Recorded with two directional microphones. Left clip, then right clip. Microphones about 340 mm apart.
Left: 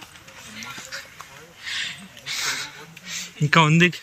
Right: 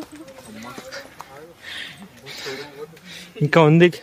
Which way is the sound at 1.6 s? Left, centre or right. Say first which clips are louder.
Left 5 dB; centre.